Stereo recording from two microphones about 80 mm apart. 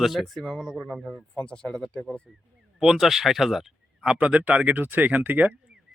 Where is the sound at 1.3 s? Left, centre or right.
Centre.